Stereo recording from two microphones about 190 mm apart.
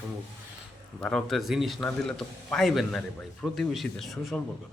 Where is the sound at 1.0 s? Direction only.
Centre (ahead or behind).